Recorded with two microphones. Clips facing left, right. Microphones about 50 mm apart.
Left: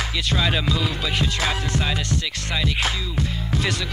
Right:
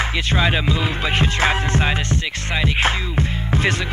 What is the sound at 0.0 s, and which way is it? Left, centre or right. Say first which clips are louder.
Music: right 4 dB; right.